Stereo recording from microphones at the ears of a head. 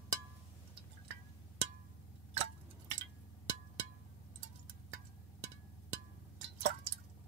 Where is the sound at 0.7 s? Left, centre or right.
Right.